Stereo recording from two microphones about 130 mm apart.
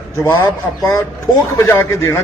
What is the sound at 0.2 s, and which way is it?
Speech, 20° left (ahead or behind).